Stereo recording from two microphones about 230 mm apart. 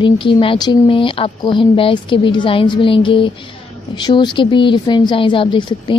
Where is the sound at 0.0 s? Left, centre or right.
Left.